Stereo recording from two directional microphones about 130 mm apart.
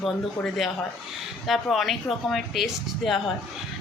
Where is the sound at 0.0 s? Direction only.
Centre (ahead or behind).